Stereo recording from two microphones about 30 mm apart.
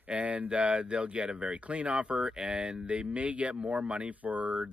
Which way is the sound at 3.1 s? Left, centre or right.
Right.